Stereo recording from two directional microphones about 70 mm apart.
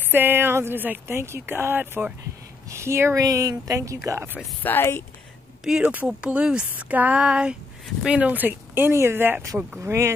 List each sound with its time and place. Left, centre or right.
0.0 s speech: right
2.7 s speech: right
3.2 s speech: right
4.6 s speech: left
5.6 s speech: centre
6.7 s a sound: right
8.0 s speech: centre; by 10.1 s right